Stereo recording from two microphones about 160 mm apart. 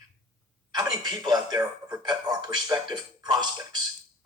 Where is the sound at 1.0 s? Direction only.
25° right (ahead or behind).